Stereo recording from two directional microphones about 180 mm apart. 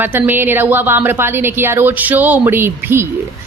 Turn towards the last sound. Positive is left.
turn(degrees=-15)  # may be behind; listen again after turning